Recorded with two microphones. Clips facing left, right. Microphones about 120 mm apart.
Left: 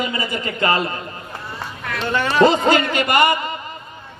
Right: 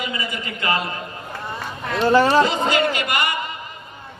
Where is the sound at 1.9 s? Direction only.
30° right (ahead or behind).